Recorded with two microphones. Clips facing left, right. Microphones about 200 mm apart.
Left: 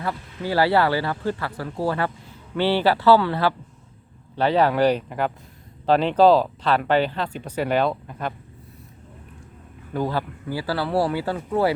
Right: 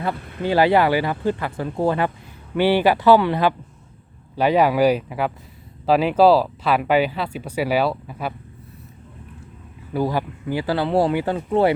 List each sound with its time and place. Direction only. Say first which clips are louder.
0.1 s speech: right 3 dB; 60° right (ahead or behind)
0.4 s speech: right 3 dB; 20° right (ahead or behind)
9.9 s speech: right 3 dB; 10° right (ahead or behind)